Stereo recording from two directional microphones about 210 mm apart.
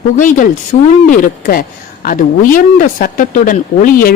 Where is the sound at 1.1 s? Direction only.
40° left (ahead or behind).